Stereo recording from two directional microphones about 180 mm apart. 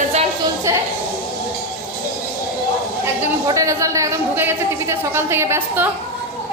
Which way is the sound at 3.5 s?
15° right (ahead or behind).